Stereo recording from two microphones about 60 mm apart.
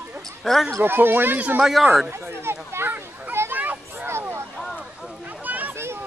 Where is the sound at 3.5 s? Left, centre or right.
Right.